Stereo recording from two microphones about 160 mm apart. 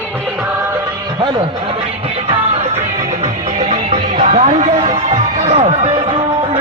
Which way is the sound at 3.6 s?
50° right (ahead or behind).